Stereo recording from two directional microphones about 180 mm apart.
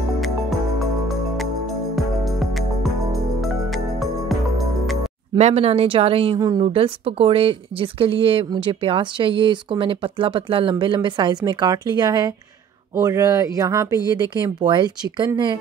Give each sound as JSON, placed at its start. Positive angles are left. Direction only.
{"t": 1.0, "sound": "music", "side_deg": 0}
{"t": 5.4, "sound": "speech", "side_deg": -35}
{"t": 6.6, "sound": "speech", "side_deg": -30}